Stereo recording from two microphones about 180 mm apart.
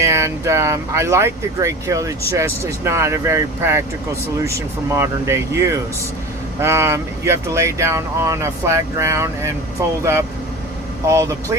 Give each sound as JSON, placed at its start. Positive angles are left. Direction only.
{"t": 0.0, "sound": "speech", "side_deg": -15}